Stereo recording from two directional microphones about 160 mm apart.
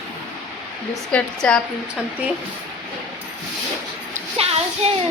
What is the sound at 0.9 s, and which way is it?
Speech, 5° left (ahead or behind).